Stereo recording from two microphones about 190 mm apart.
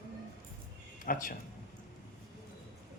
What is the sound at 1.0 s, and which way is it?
Speech, 45° left (ahead or behind).